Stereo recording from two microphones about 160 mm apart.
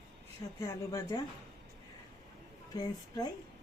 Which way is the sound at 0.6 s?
20° left (ahead or behind).